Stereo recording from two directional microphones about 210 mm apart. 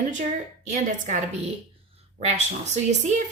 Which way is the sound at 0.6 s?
35° right (ahead or behind).